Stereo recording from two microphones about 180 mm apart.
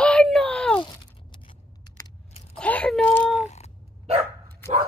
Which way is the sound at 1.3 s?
25° left (ahead or behind).